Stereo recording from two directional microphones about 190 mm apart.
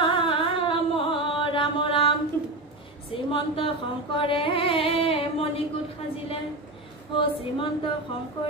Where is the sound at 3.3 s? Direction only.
25° left (ahead or behind).